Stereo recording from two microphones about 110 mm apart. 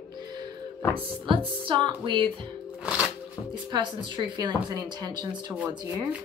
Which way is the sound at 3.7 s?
40° right (ahead or behind).